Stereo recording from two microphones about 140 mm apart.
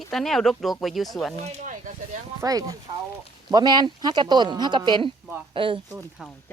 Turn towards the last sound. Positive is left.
turn(degrees=-5)  # may be behind; listen again after turning